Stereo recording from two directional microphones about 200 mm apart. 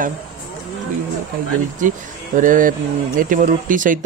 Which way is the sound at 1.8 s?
40° right (ahead or behind).